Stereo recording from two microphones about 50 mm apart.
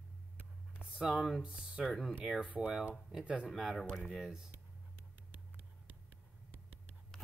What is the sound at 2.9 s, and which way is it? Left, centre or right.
Speech, centre.